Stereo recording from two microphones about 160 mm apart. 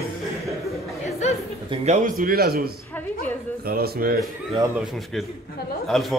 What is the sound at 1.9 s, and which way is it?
Speech, 60° right (ahead or behind).